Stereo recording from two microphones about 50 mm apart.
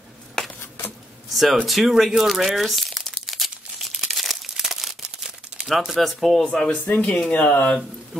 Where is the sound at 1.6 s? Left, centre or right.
Centre.